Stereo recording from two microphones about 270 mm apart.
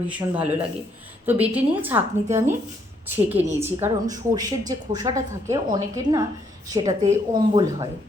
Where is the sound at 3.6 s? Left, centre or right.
Centre.